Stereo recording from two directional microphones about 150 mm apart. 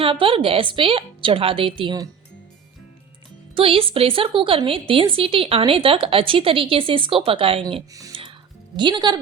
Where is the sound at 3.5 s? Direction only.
40° right (ahead or behind).